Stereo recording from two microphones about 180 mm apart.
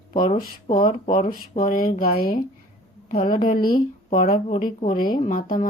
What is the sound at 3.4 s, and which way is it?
Speech, 55° left (ahead or behind).